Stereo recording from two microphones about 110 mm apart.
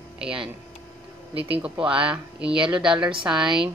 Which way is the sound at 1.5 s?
10° right (ahead or behind).